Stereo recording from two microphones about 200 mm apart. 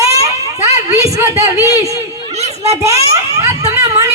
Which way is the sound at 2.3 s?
30° right (ahead or behind).